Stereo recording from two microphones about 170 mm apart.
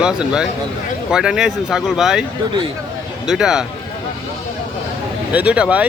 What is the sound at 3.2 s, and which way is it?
Speech, 5° right (ahead or behind).